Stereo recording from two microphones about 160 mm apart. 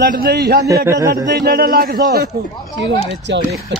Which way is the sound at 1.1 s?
85° right.